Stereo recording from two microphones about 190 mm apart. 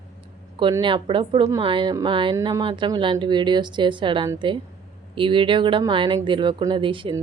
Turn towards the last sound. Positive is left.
turn(degrees=-25)  # may be behind; listen again after turning